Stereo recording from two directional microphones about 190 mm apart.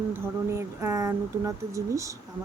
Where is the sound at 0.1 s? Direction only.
15° right (ahead or behind).